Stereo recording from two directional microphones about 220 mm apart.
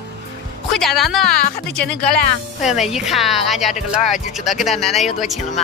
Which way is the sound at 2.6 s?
Centre (ahead or behind).